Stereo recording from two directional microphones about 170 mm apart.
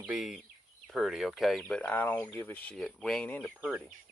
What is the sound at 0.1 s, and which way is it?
Speech, centre (ahead or behind).